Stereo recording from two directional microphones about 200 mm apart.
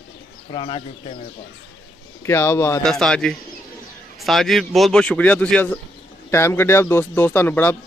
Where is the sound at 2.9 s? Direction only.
5° left (ahead or behind).